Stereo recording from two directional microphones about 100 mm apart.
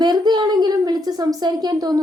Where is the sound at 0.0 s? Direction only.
45° right (ahead or behind).